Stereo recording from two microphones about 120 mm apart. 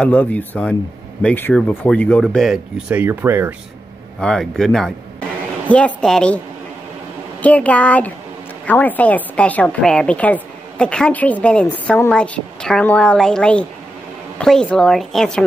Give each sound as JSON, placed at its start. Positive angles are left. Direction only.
{"t": 0.0, "sound": "a woman's voice", "side_deg": 10}
{"t": 2.2, "sound": "a woman's voice", "side_deg": 0}
{"t": 2.9, "sound": "speech", "side_deg": -15}
{"t": 4.2, "sound": "a woman's voice", "side_deg": 5}
{"t": 7.4, "sound": "a woman's voice", "side_deg": 10}